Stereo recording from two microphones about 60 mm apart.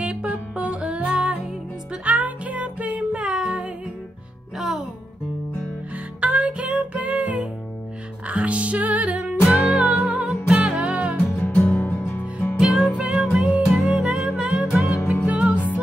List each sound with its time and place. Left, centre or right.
0.0 s music: centre
4.6 s music: centre
6.2 s music: right
9.5 s music: centre
11.3 s music: left
12.5 s music: centre